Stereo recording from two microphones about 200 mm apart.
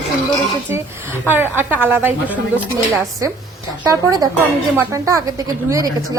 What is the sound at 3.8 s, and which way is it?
A woman's voice, 20° right (ahead or behind).